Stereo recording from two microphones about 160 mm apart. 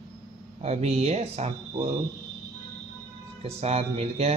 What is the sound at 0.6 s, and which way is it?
Speech, 40° right (ahead or behind).